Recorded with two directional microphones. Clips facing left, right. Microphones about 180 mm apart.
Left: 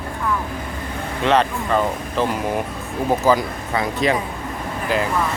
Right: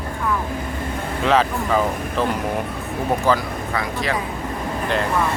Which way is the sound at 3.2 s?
20° left (ahead or behind).